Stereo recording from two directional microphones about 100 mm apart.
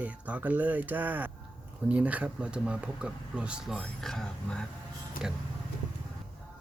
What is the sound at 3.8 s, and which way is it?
Speech, centre (ahead or behind).